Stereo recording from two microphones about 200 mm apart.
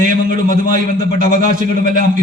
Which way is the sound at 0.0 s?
40° right (ahead or behind).